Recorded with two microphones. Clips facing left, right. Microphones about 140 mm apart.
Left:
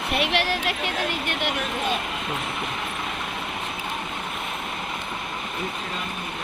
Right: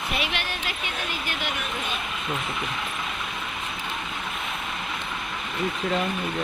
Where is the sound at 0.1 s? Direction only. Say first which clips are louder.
Left 7 dB; 70° left (ahead or behind).